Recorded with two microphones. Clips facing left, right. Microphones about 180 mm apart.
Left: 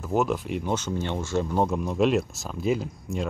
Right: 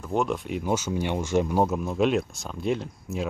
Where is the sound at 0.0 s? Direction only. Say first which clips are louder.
Left 1 dB; 5° left (ahead or behind).